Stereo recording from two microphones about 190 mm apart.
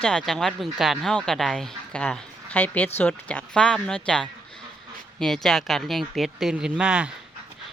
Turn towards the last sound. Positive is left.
turn(degrees=-5)  # may be behind; listen again after turning